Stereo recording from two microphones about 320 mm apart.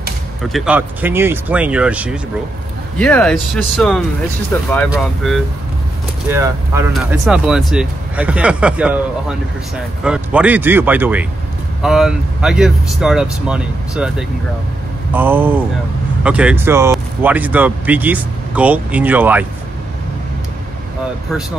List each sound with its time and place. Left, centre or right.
0.4 s speech: centre
6.3 s speech: centre